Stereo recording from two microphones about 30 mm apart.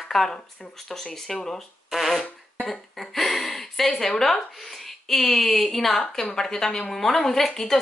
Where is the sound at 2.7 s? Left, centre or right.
Centre.